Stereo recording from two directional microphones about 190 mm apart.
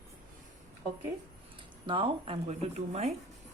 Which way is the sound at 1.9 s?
30° right (ahead or behind).